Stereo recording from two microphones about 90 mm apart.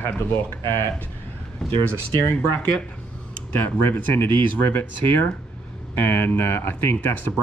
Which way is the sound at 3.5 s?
20° left (ahead or behind).